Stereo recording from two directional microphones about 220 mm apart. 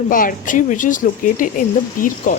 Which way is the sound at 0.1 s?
40° left (ahead or behind).